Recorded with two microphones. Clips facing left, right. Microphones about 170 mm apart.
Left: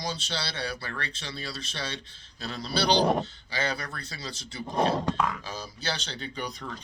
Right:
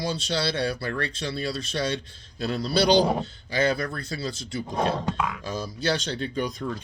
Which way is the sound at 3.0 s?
Centre (ahead or behind).